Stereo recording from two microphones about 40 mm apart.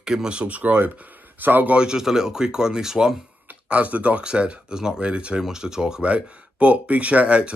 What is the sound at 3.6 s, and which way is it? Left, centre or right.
Speech, right.